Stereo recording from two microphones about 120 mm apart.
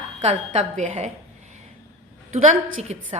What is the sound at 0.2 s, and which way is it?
Speech, 70° right (ahead or behind).